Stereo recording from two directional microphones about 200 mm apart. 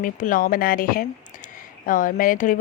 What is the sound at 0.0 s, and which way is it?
Speech, 40° left (ahead or behind).